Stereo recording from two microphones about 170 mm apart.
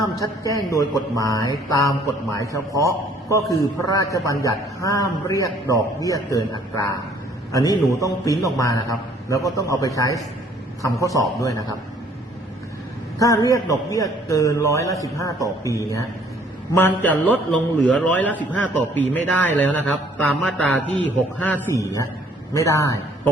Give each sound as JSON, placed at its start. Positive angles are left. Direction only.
{"t": 0.2, "sound": "a man's voice", "side_deg": 20}
{"t": 11.3, "sound": "a man's voice", "side_deg": 20}
{"t": 13.1, "sound": "a man's voice", "side_deg": 20}